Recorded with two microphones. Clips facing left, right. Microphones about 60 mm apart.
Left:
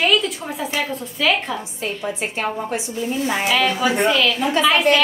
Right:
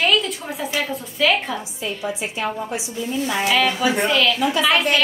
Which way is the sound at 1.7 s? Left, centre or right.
Left.